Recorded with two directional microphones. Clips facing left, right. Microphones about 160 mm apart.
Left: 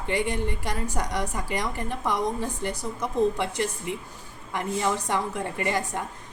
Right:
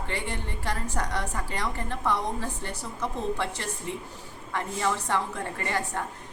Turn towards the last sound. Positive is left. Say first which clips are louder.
# left 3 dB
turn(degrees=15)  # may be behind; listen again after turning